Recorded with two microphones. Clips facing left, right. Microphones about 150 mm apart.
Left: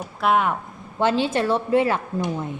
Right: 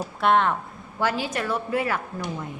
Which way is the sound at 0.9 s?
25° left (ahead or behind).